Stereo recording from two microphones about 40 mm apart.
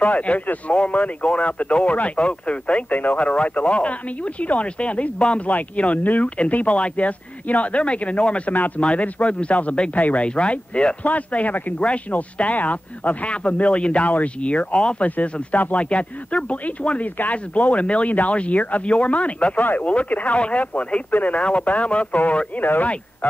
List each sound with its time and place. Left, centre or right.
0.0 s speech: left
8.5 s speech: left
8.8 s a man's voice: left
11.1 s speech: left
15.0 s speech: left
22.6 s speech: left